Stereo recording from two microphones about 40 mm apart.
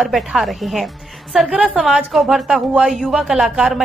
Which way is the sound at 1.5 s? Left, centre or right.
Right.